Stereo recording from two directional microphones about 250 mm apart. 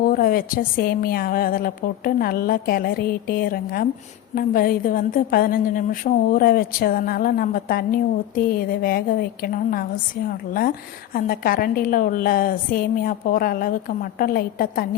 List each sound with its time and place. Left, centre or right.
0.1 s a woman's voice: left